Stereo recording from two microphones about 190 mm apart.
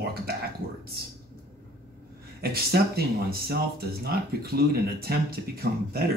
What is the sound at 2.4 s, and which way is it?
A man's voice, 55° right (ahead or behind).